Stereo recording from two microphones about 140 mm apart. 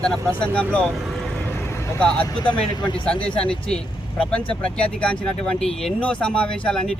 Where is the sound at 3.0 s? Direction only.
5° left (ahead or behind).